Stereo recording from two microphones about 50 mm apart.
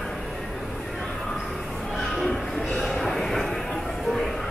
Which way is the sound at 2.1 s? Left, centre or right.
Centre.